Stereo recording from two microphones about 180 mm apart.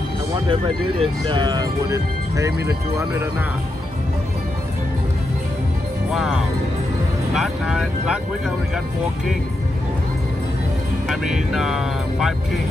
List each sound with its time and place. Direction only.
0.5 s speech: 30° right (ahead or behind); by 3.4 s 15° right (ahead or behind)
6.1 s speech: centre (ahead or behind)
11.1 s speech: centre (ahead or behind)